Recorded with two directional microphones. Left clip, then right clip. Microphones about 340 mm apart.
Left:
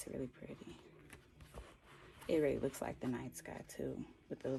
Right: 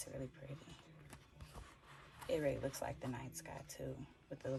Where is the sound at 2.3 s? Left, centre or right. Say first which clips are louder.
Left 4 dB; centre.